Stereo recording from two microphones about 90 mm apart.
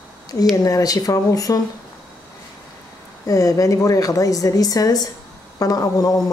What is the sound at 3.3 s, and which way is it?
A woman's voice, 40° left (ahead or behind).